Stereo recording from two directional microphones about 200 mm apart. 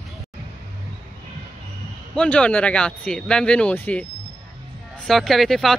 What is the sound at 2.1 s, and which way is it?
Speech, 5° left (ahead or behind).